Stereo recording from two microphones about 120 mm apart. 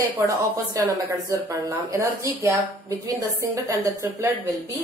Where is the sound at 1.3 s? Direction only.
25° right (ahead or behind).